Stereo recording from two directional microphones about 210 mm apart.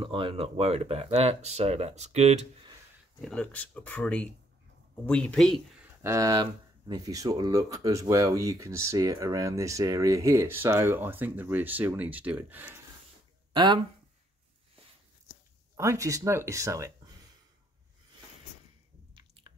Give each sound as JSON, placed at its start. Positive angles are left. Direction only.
{"t": 0.0, "sound": "speech", "side_deg": -25}
{"t": 3.2, "sound": "speech", "side_deg": 5}
{"t": 6.0, "sound": "speech", "side_deg": -15}
{"t": 13.5, "sound": "a sound", "side_deg": -20}
{"t": 15.7, "sound": "speech", "side_deg": -15}
{"t": 19.1, "sound": "squish", "side_deg": -25}